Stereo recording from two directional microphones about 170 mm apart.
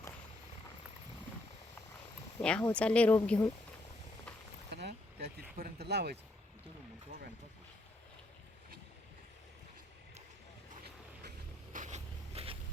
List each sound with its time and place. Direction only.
2.4 s speech: 5° left (ahead or behind)
4.7 s a sound: 80° right
5.4 s speech: 65° right (ahead or behind)
11.7 s zipper: 45° right (ahead or behind)